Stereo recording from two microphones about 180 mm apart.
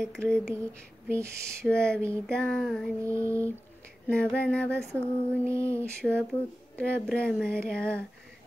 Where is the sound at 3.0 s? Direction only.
15° right (ahead or behind).